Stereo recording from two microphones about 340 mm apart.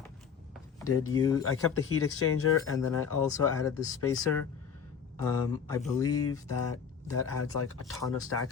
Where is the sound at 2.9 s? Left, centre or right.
Centre.